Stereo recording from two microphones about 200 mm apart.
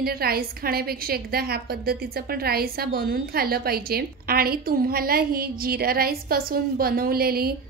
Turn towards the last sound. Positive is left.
turn(degrees=-50)  # may be behind; listen again after turning